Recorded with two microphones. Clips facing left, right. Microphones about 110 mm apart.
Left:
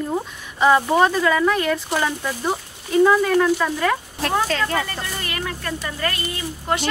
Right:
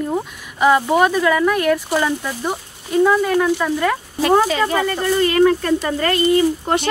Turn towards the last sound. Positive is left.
turn(degrees=-35)  # may be behind; listen again after turning